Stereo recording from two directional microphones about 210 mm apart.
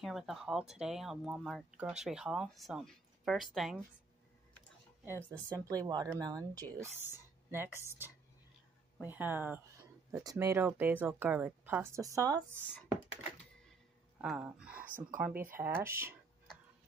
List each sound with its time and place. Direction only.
0.0 s speech: centre (ahead or behind)
5.0 s speech: 10° left (ahead or behind)
5.7 s speech: 20° right (ahead or behind)
14.2 s speech: 5° right (ahead or behind)